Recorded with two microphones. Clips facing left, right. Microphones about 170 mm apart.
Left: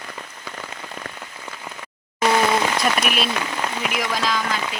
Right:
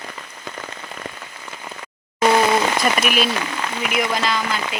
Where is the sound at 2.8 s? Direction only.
Centre (ahead or behind).